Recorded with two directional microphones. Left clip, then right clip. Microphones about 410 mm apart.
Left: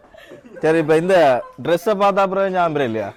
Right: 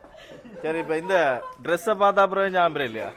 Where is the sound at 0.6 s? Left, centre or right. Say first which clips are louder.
Left 11 dB; left.